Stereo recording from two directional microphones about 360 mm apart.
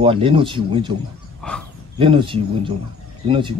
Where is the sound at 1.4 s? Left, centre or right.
Centre.